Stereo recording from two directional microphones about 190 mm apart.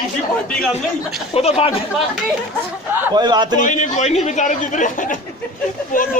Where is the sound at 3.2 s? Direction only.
20° right (ahead or behind).